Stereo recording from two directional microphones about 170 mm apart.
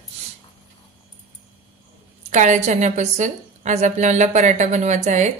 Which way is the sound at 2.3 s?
45° right (ahead or behind).